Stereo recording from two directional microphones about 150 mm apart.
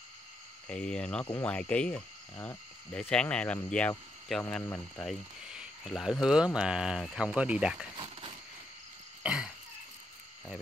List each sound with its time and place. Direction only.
0.7 s speech: 5° left (ahead or behind)
5.4 s speech: 5° right (ahead or behind)
9.2 s throat clearing: 5° right (ahead or behind)